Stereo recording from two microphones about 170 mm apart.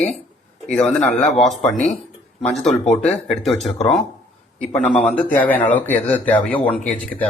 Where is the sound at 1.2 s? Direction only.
45° left (ahead or behind).